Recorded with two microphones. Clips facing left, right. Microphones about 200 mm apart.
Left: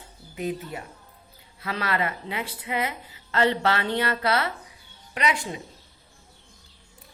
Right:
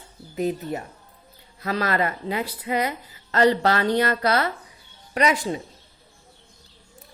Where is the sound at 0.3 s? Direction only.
40° right (ahead or behind).